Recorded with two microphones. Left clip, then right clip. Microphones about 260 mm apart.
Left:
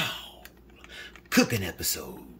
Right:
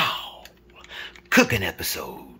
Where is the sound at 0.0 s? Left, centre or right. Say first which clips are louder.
Right 8 dB; centre.